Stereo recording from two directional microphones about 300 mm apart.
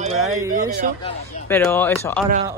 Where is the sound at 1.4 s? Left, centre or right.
Centre.